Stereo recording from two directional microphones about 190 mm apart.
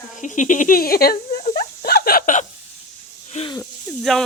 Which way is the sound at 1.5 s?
55° left (ahead or behind).